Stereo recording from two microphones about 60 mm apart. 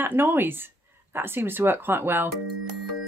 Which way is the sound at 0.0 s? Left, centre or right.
Right.